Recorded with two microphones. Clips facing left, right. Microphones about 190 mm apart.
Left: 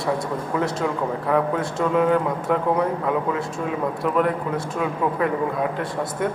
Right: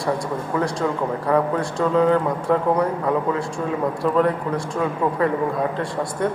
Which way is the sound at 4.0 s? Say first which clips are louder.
Right 2 dB; 5° left (ahead or behind).